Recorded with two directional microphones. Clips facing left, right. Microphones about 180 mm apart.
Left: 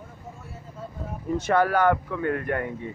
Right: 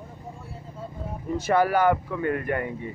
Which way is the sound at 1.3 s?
5° right (ahead or behind).